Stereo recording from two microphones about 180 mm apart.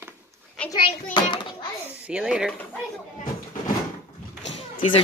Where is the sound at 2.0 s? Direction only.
5° right (ahead or behind).